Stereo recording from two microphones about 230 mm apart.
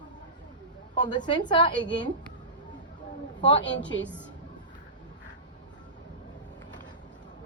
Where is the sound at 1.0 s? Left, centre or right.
Centre.